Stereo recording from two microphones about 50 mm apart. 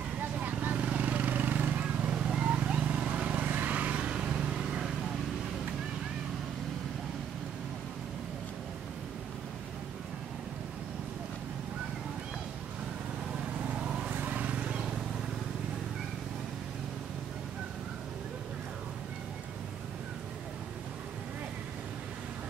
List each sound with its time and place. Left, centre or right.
0.2 s vehicle: right
2.0 s vehicle: centre
3.4 s vehicle: right; by 4.8 s centre
13.7 s vehicle: centre